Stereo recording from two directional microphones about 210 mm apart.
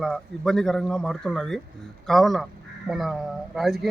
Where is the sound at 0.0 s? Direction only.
Centre (ahead or behind).